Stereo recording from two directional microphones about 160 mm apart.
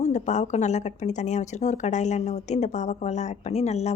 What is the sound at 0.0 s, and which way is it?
Speech, 45° left (ahead or behind).